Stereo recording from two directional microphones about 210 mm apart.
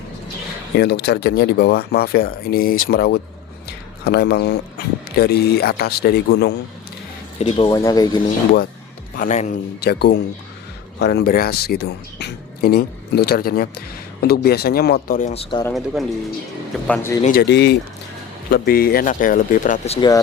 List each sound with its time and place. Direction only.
0.8 s speech: 50° left (ahead or behind)
7.3 s speech: 25° left (ahead or behind)
9.1 s speech: 35° left (ahead or behind)
9.8 s speech: 50° left (ahead or behind)
15.3 s speech: 25° left (ahead or behind)
15.7 s speech: centre (ahead or behind)
17.2 s speech: 50° left (ahead or behind); by 20.1 s 30° left (ahead or behind)